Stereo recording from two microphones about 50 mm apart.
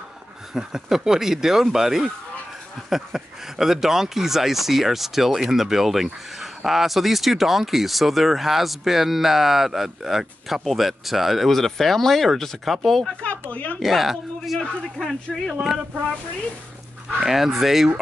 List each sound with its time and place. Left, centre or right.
0.6 s speech: centre
13.2 s a sound: left
13.7 s a man's voice: centre
17.2 s speech: centre